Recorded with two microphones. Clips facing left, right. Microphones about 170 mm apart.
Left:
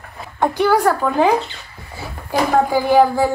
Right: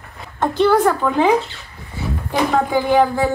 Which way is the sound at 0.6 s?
5° left (ahead or behind).